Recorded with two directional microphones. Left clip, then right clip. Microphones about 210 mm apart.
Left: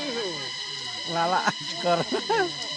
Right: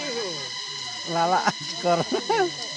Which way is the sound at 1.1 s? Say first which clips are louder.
Right 2 dB; 45° right (ahead or behind).